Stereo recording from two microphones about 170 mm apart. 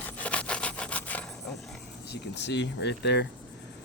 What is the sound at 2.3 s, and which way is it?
Speech, 90° left.